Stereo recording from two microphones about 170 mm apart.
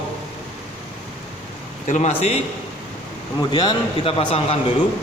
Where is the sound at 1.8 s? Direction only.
45° left (ahead or behind).